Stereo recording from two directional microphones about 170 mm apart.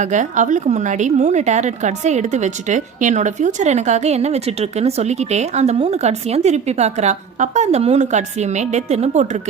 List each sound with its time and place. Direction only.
0.0 s a woman's voice: 45° right (ahead or behind)